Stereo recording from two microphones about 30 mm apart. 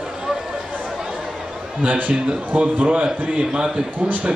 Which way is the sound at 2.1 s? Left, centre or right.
Right.